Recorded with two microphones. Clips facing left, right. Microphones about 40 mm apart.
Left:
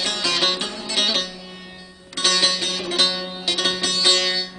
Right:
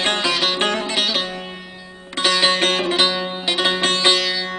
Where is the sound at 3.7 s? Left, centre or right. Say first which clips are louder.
Right 4 dB; right.